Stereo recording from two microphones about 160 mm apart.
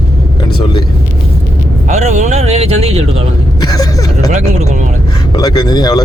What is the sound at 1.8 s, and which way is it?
Speech, 45° right (ahead or behind).